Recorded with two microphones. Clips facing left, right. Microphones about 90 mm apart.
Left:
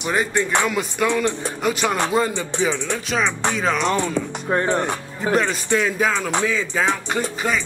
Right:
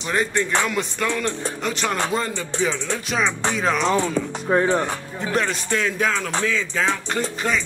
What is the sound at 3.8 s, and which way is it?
Speech, 10° right (ahead or behind).